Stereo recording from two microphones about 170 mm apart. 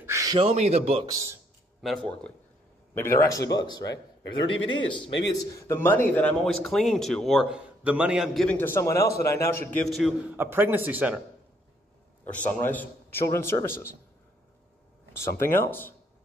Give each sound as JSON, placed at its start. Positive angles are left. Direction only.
{"t": 0.0, "sound": "a sound", "side_deg": -20}
{"t": 0.4, "sound": "a man's voice", "side_deg": -40}
{"t": 1.0, "sound": "a man's voice", "side_deg": -20}
{"t": 1.8, "sound": "a man's voice", "side_deg": 0}
{"t": 2.9, "sound": "a man's voice", "side_deg": 15}
{"t": 5.5, "sound": "a man's voice", "side_deg": 20}
{"t": 9.7, "sound": "a man's voice", "side_deg": 5}
{"t": 10.3, "sound": "speech", "side_deg": -15}
{"t": 12.3, "sound": "a man's voice", "side_deg": 10}
{"t": 15.3, "sound": "a man's voice", "side_deg": 15}